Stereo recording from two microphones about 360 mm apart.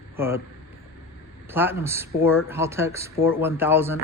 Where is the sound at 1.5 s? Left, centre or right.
Centre.